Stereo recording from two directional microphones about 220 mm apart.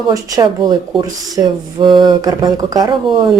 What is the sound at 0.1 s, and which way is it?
Speech, 15° right (ahead or behind).